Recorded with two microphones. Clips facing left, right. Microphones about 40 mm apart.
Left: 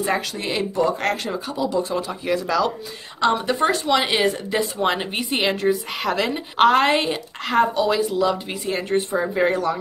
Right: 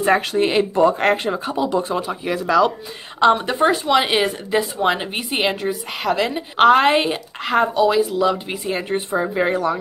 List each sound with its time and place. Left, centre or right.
0.0 s speech: right
2.0 s speech: centre
3.5 s speech: centre